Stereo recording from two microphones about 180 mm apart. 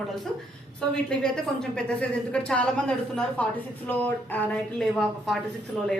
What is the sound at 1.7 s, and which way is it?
A woman's voice, 5° left (ahead or behind).